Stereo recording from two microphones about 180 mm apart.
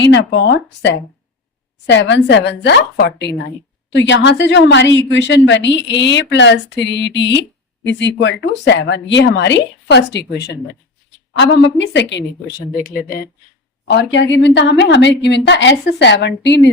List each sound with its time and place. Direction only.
0.0 s a woman's voice: 80° left
3.9 s a woman's voice: 80° left; by 10.6 s 65° left (ahead or behind)
11.3 s a woman's voice: 85° left; by 13.0 s 50° left (ahead or behind)
13.9 s a woman's voice: 80° left